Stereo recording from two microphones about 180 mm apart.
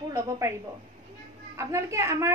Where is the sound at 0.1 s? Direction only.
15° right (ahead or behind).